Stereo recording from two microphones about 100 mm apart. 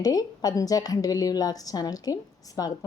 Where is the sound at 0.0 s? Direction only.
40° left (ahead or behind).